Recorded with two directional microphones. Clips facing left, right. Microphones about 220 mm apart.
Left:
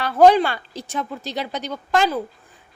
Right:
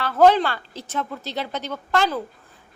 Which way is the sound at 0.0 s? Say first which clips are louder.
Left 2 dB; 15° left (ahead or behind).